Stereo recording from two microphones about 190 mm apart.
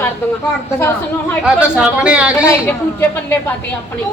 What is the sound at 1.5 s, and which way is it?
Speech, 5° right (ahead or behind).